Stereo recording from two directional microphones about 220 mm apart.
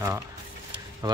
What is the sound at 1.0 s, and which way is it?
Speech, 15° right (ahead or behind).